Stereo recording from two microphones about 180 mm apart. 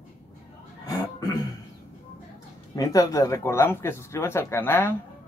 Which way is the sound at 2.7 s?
20° left (ahead or behind).